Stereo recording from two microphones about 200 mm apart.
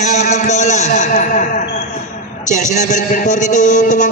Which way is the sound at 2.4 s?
35° left (ahead or behind).